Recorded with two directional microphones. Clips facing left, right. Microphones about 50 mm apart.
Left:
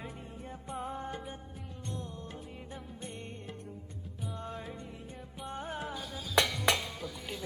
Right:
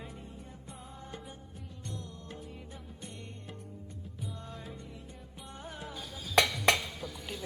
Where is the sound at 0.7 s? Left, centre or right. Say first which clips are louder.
Left 13 dB; left.